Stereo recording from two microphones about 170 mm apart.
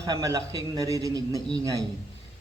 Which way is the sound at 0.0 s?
20° right (ahead or behind).